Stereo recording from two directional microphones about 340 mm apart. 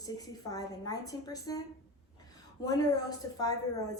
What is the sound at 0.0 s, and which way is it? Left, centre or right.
A woman's voice, centre.